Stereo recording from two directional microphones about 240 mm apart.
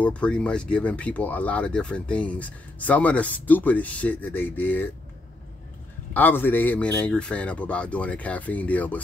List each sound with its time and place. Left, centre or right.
0.0 s speech: centre
6.1 s speech: centre